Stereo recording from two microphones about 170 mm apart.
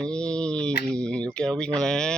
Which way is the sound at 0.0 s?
5° left (ahead or behind).